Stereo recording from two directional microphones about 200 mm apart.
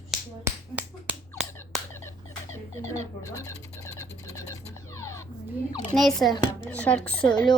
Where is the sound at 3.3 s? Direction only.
15° left (ahead or behind).